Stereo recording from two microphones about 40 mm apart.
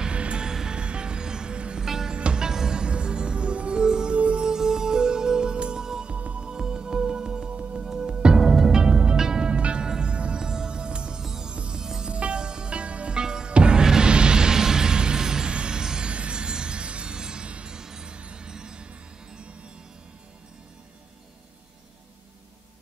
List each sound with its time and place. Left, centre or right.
0.0 s music: right
0.5 s music: centre
1.9 s music: centre
2.1 s music: right
2.4 s music: centre
4.5 s music: centre; by 6.4 s right
6.4 s music: centre
8.5 s music: centre
8.8 s music: right
11.5 s music: right
11.8 s music: centre
12.1 s music: right
16.1 s music: right